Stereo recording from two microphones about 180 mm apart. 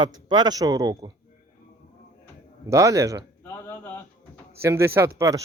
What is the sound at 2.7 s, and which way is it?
Speech, 15° right (ahead or behind).